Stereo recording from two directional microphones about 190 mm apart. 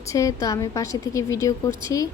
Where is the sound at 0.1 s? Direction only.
15° left (ahead or behind).